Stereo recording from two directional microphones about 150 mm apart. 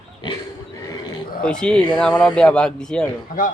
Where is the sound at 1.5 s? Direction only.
5° left (ahead or behind).